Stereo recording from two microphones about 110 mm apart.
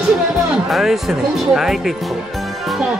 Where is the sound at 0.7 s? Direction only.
Centre (ahead or behind).